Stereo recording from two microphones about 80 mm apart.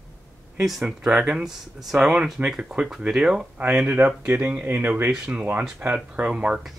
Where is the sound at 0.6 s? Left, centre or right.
Centre.